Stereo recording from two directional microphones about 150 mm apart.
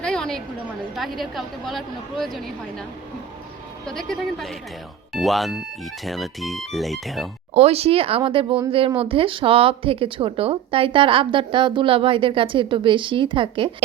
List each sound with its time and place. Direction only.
0.0 s a sound: 5° left (ahead or behind)
0.9 s a woman's voice: centre (ahead or behind)
3.8 s a woman's voice: 5° left (ahead or behind)
7.5 s speech: 45° right (ahead or behind)